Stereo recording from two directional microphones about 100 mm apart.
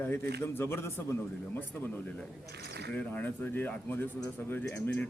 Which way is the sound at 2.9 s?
15° left (ahead or behind).